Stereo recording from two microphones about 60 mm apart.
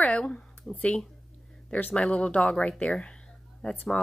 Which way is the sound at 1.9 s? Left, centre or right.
Centre.